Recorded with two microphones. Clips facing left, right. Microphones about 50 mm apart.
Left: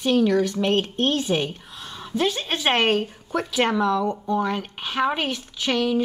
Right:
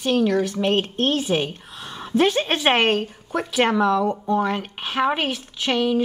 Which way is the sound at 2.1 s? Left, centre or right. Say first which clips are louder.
Right 5 dB; right.